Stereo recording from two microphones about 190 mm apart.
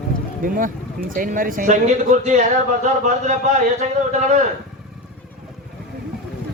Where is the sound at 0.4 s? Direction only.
45° right (ahead or behind).